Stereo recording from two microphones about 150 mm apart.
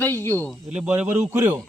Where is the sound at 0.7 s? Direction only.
10° right (ahead or behind).